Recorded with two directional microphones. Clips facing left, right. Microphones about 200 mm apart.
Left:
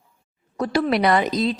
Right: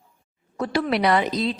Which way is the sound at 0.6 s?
40° left (ahead or behind).